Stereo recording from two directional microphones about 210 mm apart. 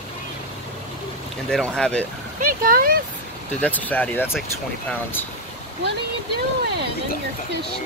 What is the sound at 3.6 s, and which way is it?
Speech, 5° left (ahead or behind).